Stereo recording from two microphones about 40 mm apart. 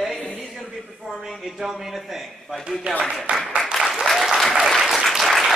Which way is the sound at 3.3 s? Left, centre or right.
Right.